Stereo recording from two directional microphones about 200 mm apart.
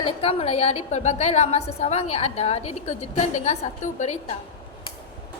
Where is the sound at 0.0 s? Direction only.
30° left (ahead or behind).